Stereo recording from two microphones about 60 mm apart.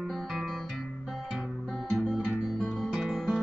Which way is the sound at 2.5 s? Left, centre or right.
Centre.